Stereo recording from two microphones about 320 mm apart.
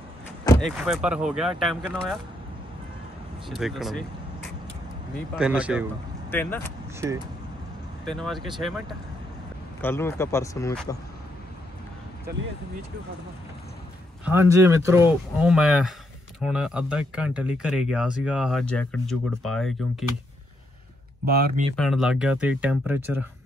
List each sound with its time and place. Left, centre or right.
0.5 s speech: centre
3.4 s speech: centre
5.3 s speech: centre
7.0 s speech: centre
8.0 s speech: centre
14.2 s speech: centre
21.3 s speech: right
21.7 s speech: centre